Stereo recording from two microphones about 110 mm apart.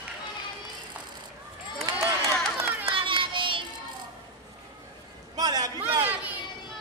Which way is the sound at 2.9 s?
50° right (ahead or behind).